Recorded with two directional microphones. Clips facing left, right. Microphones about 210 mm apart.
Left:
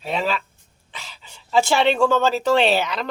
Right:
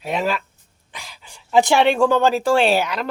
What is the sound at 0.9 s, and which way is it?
Speech, 10° right (ahead or behind).